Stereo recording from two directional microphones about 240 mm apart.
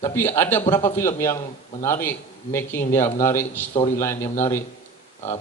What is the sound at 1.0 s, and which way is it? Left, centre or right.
A man's voice, centre.